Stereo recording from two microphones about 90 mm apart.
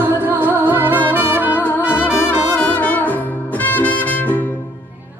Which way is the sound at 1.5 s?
20° left (ahead or behind).